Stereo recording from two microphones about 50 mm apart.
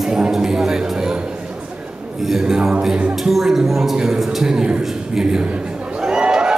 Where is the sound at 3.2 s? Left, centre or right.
Centre.